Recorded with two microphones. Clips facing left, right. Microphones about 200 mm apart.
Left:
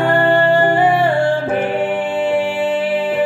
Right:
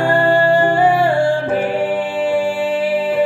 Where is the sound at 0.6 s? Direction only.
20° left (ahead or behind).